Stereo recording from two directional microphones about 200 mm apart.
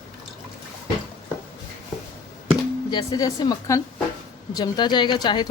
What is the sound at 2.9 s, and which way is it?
Speech, 20° left (ahead or behind).